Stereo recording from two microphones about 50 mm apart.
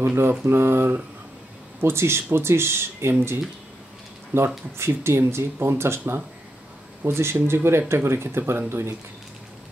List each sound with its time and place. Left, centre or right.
0.0 s speech: right